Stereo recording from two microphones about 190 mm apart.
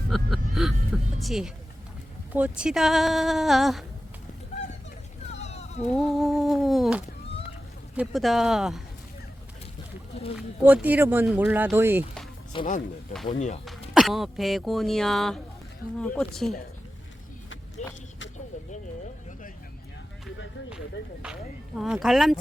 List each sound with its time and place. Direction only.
0.1 s speech: centre (ahead or behind)
5.3 s sheep: 35° left (ahead or behind)
5.9 s speech: centre (ahead or behind)
10.3 s speech: 5° right (ahead or behind)
12.5 s speech: 25° left (ahead or behind)
13.3 s speech: 40° left (ahead or behind)
13.9 s speech: centre (ahead or behind)
17.8 s a sound: 35° left (ahead or behind)
21.8 s speech: centre (ahead or behind)